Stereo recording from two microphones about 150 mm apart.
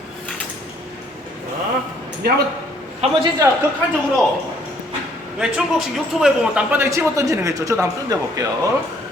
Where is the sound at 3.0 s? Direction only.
45° right (ahead or behind).